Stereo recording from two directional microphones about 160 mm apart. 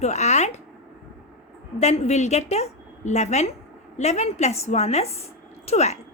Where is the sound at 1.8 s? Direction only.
45° left (ahead or behind).